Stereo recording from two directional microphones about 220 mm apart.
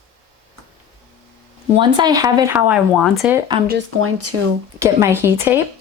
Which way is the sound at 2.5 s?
5° right (ahead or behind).